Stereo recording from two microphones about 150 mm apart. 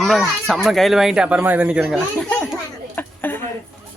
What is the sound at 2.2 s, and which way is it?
Chatter, 5° left (ahead or behind).